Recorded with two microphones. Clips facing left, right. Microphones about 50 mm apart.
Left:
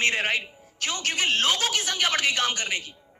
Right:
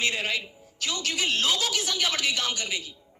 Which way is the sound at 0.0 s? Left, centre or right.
Left.